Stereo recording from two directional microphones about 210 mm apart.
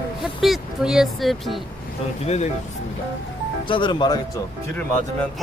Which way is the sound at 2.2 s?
30° left (ahead or behind).